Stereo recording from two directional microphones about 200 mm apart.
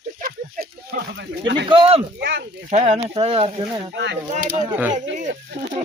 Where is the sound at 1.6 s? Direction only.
25° right (ahead or behind).